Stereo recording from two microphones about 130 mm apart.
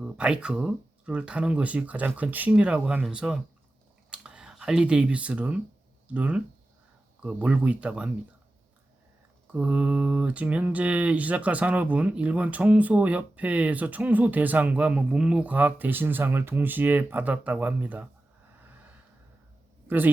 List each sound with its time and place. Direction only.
0.0 s speech: 5° right (ahead or behind)
9.5 s speech: 10° right (ahead or behind)